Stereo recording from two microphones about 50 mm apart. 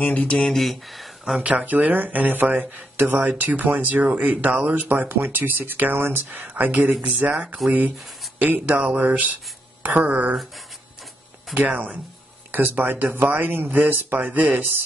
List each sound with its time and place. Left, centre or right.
0.0 s speech: left
0.3 s speech: centre
0.6 s speech: centre
1.5 s speech: right
6.5 s speech: right
8.7 s speech: right
11.5 s speech: right